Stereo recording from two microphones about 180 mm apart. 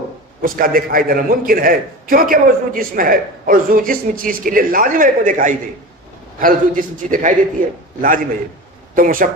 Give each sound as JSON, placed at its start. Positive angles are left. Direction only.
{"t": 0.4, "sound": "a man's voice", "side_deg": -55}
{"t": 9.0, "sound": "a man's voice", "side_deg": -50}